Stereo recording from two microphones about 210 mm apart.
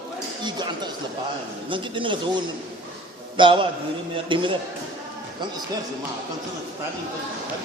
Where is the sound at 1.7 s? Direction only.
25° right (ahead or behind).